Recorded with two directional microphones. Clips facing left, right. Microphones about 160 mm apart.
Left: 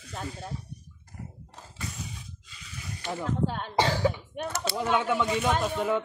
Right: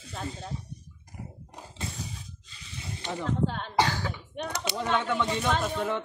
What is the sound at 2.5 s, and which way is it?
Snake, 30° right (ahead or behind).